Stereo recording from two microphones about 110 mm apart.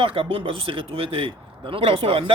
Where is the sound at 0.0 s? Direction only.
55° right (ahead or behind).